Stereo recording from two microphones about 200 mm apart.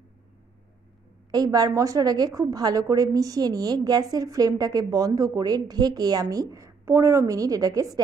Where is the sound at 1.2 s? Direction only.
20° right (ahead or behind).